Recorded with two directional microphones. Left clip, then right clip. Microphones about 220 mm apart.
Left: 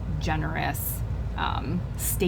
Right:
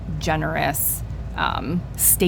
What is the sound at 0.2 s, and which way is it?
Speech, 50° right (ahead or behind).